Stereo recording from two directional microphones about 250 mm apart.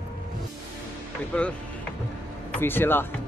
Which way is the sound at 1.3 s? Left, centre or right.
Centre.